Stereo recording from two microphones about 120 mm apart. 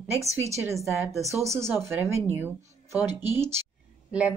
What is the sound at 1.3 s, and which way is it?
A woman's voice, 25° right (ahead or behind).